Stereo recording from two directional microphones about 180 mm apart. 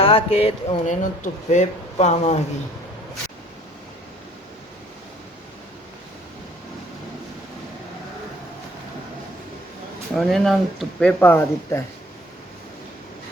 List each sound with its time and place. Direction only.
0.0 s speech: 30° left (ahead or behind)
10.2 s speech: centre (ahead or behind)